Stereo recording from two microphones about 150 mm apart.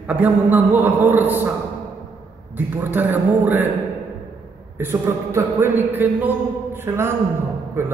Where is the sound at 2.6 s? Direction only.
15° right (ahead or behind).